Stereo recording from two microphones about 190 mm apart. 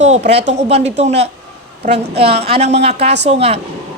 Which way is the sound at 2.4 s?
35° right (ahead or behind).